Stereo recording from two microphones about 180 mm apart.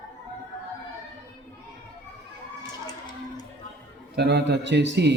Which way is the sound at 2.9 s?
20° left (ahead or behind).